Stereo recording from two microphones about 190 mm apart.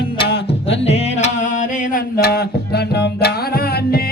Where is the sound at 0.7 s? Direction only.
35° left (ahead or behind).